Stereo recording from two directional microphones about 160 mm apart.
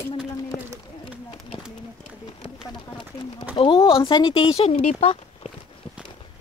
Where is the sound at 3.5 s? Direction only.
35° left (ahead or behind).